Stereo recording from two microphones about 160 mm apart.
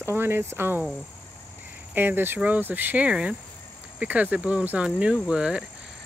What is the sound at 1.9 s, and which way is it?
Speech, 10° right (ahead or behind).